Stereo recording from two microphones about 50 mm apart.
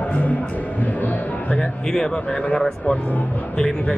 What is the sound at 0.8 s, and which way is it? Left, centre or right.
Speech, left.